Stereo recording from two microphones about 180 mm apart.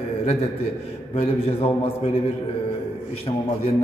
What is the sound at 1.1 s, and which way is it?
Speech, 30° left (ahead or behind).